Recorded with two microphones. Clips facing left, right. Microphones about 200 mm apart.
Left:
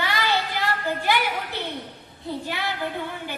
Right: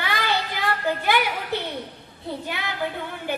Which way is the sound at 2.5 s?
50° right (ahead or behind).